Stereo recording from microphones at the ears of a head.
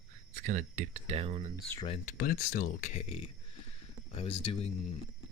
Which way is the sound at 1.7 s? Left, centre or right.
Left.